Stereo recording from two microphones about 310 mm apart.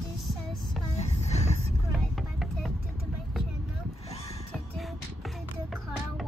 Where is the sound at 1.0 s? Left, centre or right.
Left.